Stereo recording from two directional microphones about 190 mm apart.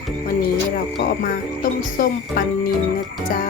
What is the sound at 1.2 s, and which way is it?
Speech, 45° left (ahead or behind).